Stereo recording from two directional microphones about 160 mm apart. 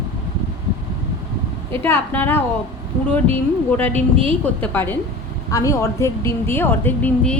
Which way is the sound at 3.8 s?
10° left (ahead or behind).